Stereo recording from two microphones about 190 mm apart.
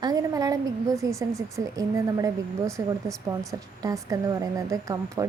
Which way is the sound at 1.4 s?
15° right (ahead or behind).